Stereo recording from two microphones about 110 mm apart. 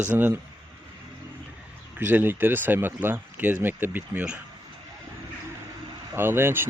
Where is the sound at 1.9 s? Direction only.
20° right (ahead or behind).